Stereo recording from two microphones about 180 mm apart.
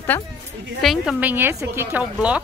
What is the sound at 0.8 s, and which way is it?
A woman's voice, centre (ahead or behind).